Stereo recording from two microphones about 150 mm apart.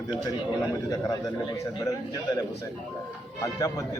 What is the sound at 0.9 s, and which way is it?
A man's voice, 25° left (ahead or behind).